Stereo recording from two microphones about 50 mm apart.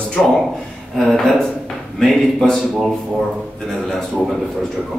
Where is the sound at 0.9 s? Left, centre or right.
Centre.